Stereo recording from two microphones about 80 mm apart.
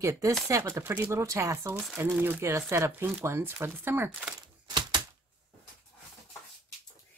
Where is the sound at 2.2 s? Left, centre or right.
Right.